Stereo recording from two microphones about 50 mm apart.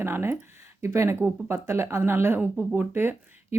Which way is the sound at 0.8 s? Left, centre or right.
Right.